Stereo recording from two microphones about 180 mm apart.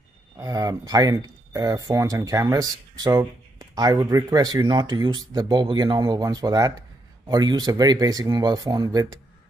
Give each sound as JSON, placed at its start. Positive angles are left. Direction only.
{"t": 0.4, "sound": "speech", "side_deg": -20}